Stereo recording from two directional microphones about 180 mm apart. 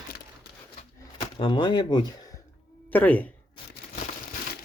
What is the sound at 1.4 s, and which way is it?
Speech, 25° left (ahead or behind).